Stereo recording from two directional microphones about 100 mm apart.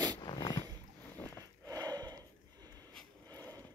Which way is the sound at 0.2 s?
45° left (ahead or behind).